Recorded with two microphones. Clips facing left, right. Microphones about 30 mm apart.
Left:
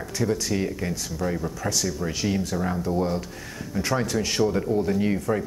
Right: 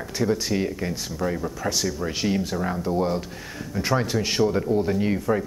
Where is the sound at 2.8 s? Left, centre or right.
Centre.